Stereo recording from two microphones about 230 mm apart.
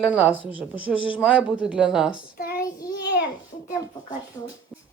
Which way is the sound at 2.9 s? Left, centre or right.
Left.